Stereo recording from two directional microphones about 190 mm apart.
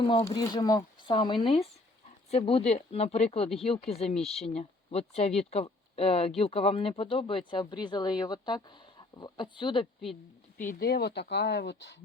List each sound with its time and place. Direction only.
0.0 s speech: 25° left (ahead or behind)
4.2 s speech: centre (ahead or behind)
4.5 s speech: 35° left (ahead or behind)
10.6 s speech: 50° left (ahead or behind)